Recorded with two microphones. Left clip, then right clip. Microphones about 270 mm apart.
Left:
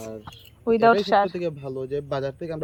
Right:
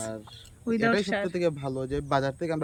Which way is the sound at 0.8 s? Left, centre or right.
Centre.